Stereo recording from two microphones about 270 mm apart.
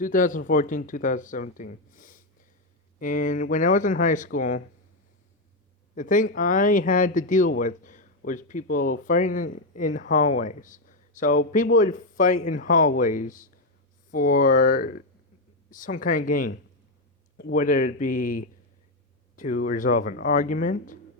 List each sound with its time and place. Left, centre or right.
0.0 s speech: left
5.9 s speech: left